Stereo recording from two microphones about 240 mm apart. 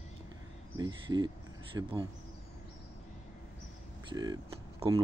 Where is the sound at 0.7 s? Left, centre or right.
Centre.